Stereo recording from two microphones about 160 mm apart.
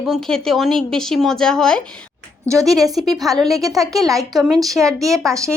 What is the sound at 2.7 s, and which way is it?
Speech, 20° right (ahead or behind).